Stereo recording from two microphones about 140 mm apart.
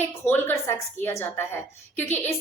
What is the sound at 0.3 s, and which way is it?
A woman's voice, 15° left (ahead or behind).